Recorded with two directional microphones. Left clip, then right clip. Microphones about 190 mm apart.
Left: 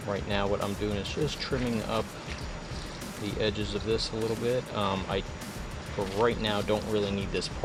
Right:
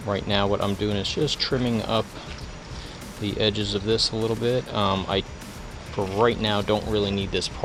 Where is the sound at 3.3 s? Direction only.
50° right (ahead or behind).